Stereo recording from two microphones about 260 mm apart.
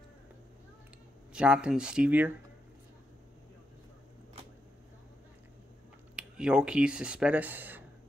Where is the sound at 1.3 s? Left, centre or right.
Centre.